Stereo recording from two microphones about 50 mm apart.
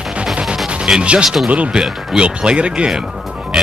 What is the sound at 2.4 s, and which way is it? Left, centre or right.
Speech, centre.